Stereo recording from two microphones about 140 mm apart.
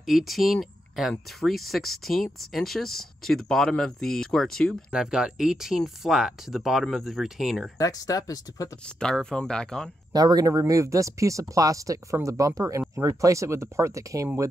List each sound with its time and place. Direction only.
0.0 s speech: centre (ahead or behind)
7.7 s speech: 25° left (ahead or behind)
8.8 s speech: 5° left (ahead or behind)
10.1 s speech: 25° right (ahead or behind)